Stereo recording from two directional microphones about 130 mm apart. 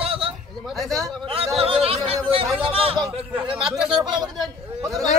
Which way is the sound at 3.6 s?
5° right (ahead or behind).